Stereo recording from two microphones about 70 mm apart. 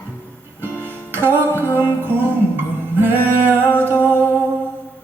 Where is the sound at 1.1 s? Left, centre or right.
Right.